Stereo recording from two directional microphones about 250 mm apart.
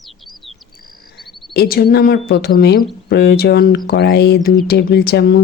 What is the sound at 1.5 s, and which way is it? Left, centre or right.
A woman's voice, left.